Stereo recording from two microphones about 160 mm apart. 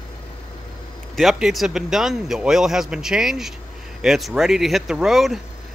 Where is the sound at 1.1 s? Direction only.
Centre (ahead or behind).